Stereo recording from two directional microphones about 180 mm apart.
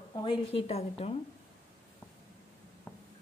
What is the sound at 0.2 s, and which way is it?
Speech, 30° left (ahead or behind).